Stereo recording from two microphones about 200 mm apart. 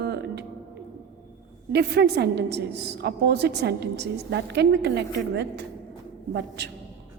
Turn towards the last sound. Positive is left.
turn(degrees=-60)  # may be behind; listen again after turning